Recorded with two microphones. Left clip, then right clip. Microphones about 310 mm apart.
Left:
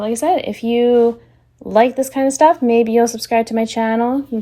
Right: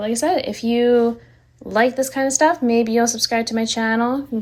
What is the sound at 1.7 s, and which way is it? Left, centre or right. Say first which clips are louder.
Speech: left 4 dB; centre.